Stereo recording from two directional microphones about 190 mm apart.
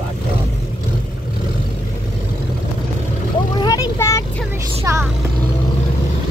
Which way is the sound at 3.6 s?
20° left (ahead or behind).